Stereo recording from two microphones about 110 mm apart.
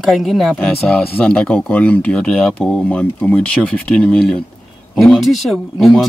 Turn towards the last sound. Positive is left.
turn(degrees=0)  # may be behind; listen again after turning